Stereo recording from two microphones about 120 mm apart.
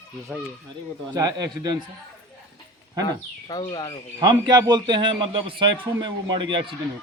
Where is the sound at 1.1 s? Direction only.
30° right (ahead or behind).